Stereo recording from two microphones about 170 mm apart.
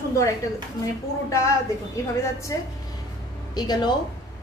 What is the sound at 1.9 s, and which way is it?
A woman's voice, 20° left (ahead or behind).